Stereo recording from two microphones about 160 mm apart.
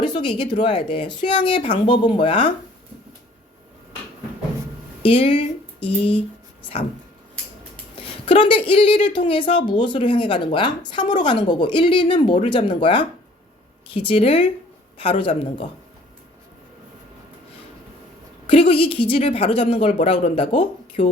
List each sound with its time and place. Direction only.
0.0 s a woman's voice: 30° left (ahead or behind)
5.0 s speech: 35° left (ahead or behind)
7.9 s a woman's voice: 35° left (ahead or behind)
18.4 s a woman's voice: 35° left (ahead or behind)